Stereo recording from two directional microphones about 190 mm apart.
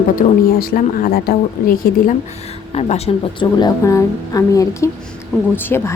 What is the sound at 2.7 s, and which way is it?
Speech, 35° left (ahead or behind).